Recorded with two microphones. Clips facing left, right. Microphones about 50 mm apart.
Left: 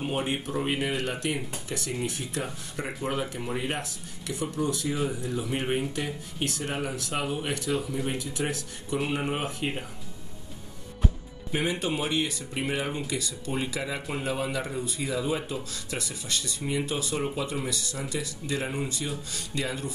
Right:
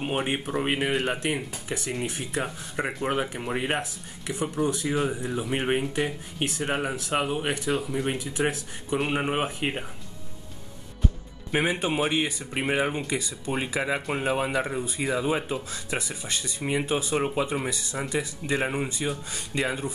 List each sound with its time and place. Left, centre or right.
0.0 s speech: right
11.5 s speech: right